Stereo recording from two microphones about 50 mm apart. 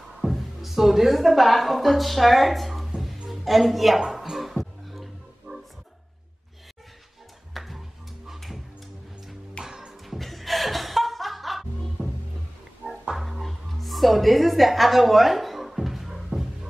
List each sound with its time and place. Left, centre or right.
0.2 s a woman's voice: centre
4.0 s music: centre
5.5 s music: right
7.5 s music: centre
9.7 s music: centre
10.0 s music: centre
12.8 s music: right
13.2 s music: centre